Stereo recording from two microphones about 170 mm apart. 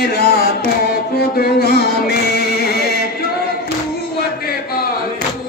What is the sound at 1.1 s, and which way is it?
Music, 70° left (ahead or behind).